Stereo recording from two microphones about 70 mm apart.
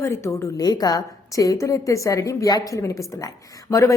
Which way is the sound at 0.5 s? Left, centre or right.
Left.